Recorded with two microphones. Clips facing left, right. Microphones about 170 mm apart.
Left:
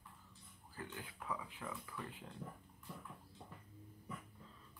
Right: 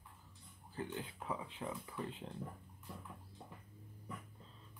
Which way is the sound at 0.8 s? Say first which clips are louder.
Right 2 dB; 25° right (ahead or behind).